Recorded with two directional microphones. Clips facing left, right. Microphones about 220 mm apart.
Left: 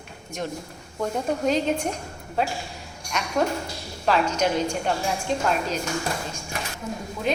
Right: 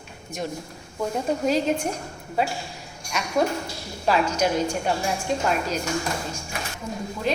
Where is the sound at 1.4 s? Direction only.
5° right (ahead or behind).